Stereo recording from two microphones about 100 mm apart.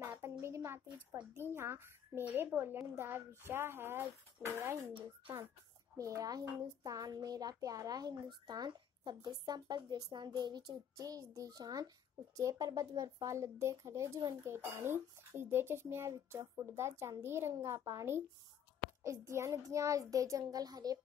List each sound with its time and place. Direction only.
0.0 s a sound: 25° right (ahead or behind)
1.4 s a woman's voice: 25° right (ahead or behind)
5.9 s a child's voice: 35° right (ahead or behind)